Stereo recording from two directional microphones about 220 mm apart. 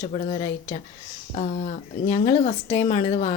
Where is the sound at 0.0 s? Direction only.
35° left (ahead or behind).